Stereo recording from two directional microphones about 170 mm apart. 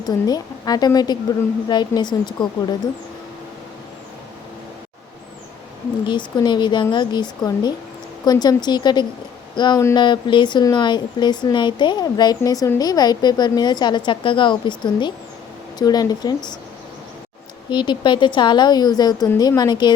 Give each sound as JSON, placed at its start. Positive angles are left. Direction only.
{"t": 0.3, "sound": "speech", "side_deg": 20}
{"t": 6.1, "sound": "speech", "side_deg": 25}
{"t": 17.7, "sound": "speech", "side_deg": 25}